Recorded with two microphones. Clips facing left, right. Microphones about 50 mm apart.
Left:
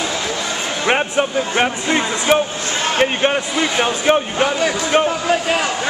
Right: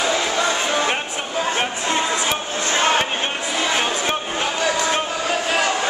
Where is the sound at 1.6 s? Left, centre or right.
Left.